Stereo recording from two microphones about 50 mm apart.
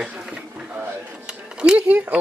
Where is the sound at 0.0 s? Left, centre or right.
Centre.